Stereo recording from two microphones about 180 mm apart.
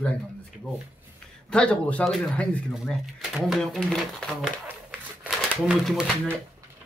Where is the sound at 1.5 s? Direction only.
5° left (ahead or behind).